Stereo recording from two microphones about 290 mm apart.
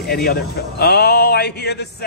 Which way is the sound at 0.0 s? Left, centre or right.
Left.